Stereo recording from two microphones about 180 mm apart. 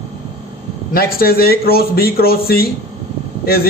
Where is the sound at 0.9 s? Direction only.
55° left (ahead or behind).